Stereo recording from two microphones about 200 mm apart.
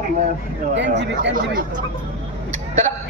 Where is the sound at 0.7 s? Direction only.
60° right (ahead or behind).